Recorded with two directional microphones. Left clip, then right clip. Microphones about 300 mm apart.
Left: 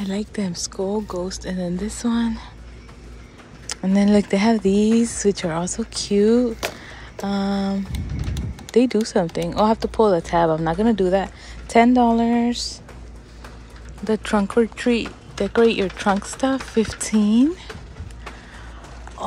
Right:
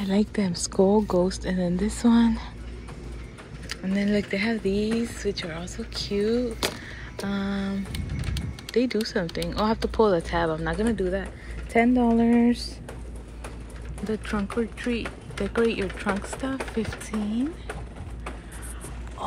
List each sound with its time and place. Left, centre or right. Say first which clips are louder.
0.0 s speech: right 1 dB; centre
3.6 s speech: left 7 dB; centre
14.0 s speech: left 9 dB; centre